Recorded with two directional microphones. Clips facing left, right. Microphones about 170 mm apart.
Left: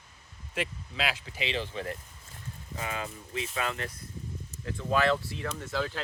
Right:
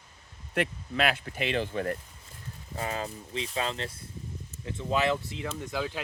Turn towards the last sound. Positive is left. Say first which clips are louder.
# even
turn(degrees=-15)  # may be behind; listen again after turning